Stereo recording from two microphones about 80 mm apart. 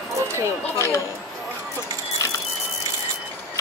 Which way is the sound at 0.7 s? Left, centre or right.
Left.